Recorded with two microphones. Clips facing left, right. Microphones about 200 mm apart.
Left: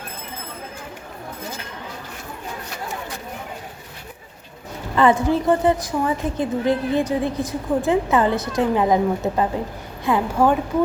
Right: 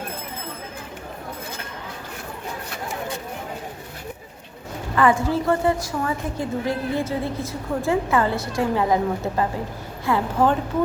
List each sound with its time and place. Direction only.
4.9 s a woman's voice: 20° left (ahead or behind)